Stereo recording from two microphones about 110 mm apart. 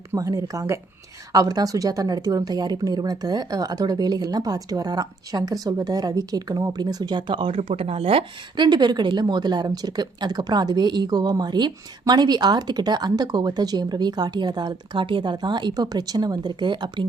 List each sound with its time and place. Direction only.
0.1 s speech: 30° right (ahead or behind)